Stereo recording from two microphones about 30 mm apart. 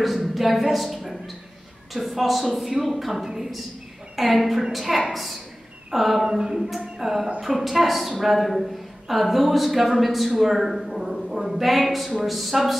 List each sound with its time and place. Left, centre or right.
0.0 s a woman's voice: centre
6.2 s a sound: centre
6.8 s speech: centre